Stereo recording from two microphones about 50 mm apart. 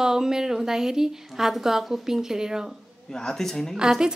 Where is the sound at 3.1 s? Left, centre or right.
Centre.